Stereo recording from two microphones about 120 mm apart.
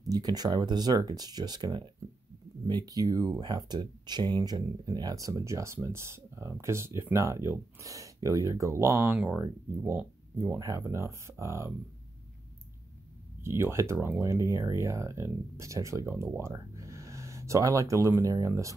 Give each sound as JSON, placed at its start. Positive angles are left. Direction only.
{"t": 0.1, "sound": "speech", "side_deg": -35}
{"t": 13.4, "sound": "speech", "side_deg": -20}